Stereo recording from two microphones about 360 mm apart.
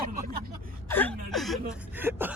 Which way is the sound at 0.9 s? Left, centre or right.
Centre.